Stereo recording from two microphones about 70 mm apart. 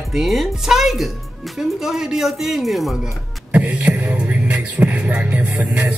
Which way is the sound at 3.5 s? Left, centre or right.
Right.